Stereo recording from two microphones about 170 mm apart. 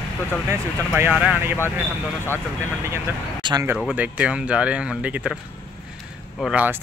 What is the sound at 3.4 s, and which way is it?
Speech, 25° right (ahead or behind).